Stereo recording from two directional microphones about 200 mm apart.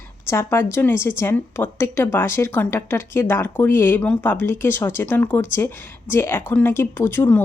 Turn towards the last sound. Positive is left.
turn(degrees=10)  # may be behind; listen again after turning